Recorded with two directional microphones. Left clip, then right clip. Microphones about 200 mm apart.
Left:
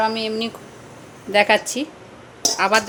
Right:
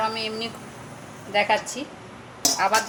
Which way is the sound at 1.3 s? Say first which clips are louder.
Left 6 dB; 50° left (ahead or behind).